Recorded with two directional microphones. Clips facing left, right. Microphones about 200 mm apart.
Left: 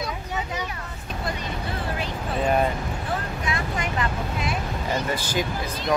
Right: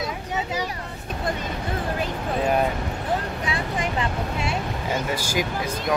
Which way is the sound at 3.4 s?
30° right (ahead or behind).